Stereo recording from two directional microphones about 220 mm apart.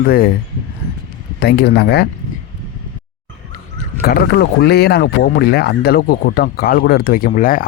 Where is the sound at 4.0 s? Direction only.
45° left (ahead or behind).